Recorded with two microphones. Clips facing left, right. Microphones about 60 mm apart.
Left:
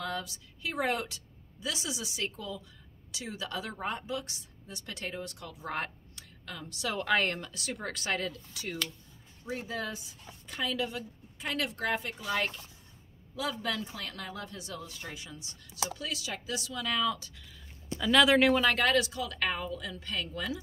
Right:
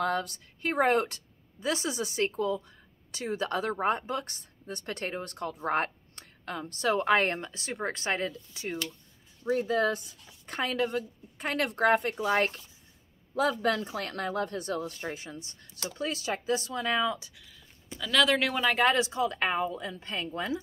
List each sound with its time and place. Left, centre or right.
0.0 s a woman's voice: right
9.7 s a woman's voice: right
18.0 s speech: centre
18.6 s speech: centre
18.9 s a woman's voice: right